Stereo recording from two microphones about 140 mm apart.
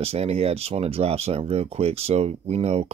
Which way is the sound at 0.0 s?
45° right (ahead or behind).